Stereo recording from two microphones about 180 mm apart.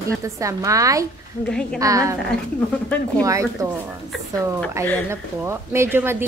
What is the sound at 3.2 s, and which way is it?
Speech, 15° right (ahead or behind).